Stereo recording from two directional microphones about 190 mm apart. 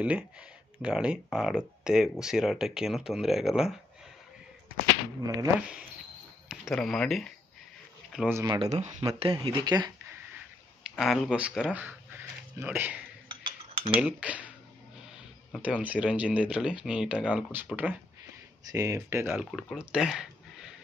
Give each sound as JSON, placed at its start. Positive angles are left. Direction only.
{"t": 0.0, "sound": "speech", "side_deg": -5}
{"t": 5.2, "sound": "speech", "side_deg": -20}
{"t": 6.5, "sound": "speech", "side_deg": 0}
{"t": 8.3, "sound": "speech", "side_deg": -15}
{"t": 8.5, "sound": "speech", "side_deg": -35}
{"t": 10.8, "sound": "speech", "side_deg": 0}
{"t": 14.0, "sound": "speech", "side_deg": -5}
{"t": 15.5, "sound": "speech", "side_deg": -5}
{"t": 19.3, "sound": "speech", "side_deg": 0}